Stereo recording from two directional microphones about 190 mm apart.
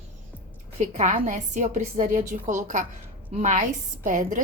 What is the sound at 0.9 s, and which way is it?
A woman's voice, 40° right (ahead or behind).